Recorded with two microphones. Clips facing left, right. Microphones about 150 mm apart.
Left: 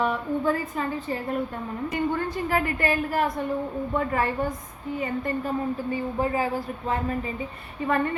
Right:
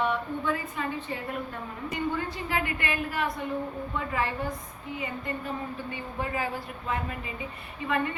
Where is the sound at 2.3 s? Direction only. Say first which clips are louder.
Left 5 dB; 45° left (ahead or behind).